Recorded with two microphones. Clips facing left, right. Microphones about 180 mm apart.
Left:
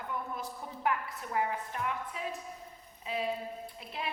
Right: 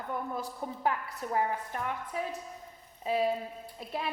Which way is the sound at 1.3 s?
40° right (ahead or behind).